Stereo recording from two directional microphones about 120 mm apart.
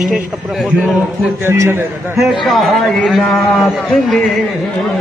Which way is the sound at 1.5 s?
20° right (ahead or behind).